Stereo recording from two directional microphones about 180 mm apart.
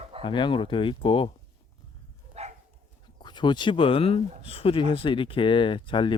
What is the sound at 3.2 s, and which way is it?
Speech, 25° left (ahead or behind).